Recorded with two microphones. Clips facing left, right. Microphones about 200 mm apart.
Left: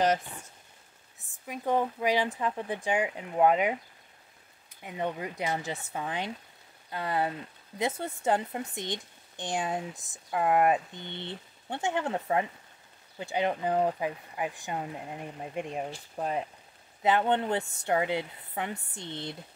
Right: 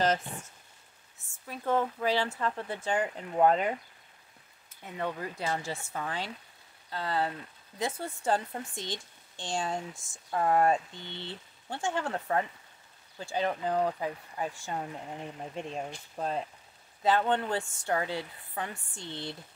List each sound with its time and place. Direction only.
1.5 s speech: 15° left (ahead or behind)
4.8 s speech: 15° left (ahead or behind)